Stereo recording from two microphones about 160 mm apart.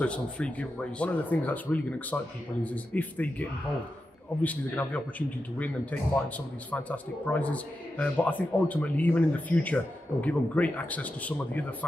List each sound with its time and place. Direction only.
0.0 s a man's voice: 5° left (ahead or behind)